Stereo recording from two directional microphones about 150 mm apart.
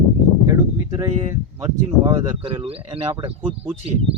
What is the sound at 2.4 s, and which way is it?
Speech, 35° right (ahead or behind).